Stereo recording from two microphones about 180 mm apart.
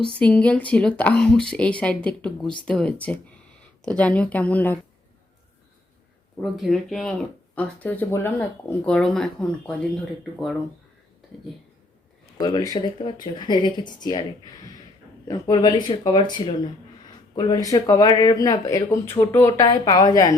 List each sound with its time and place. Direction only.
0.2 s speech: 5° left (ahead or behind)
6.3 s speech: centre (ahead or behind)
12.4 s speech: 20° left (ahead or behind)
15.3 s speech: 20° left (ahead or behind)